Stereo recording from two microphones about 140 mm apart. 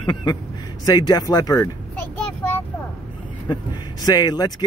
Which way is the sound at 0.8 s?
30° left (ahead or behind).